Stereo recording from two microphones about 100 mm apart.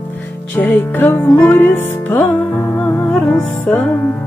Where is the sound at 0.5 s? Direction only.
20° left (ahead or behind).